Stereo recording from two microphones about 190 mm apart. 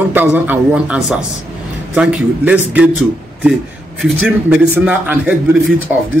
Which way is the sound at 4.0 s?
5° right (ahead or behind).